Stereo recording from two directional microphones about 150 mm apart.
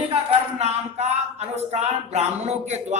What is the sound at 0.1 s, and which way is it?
Speech, 45° right (ahead or behind).